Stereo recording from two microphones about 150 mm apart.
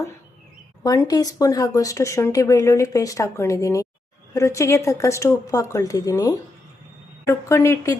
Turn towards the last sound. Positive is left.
turn(degrees=20)  # may be behind; listen again after turning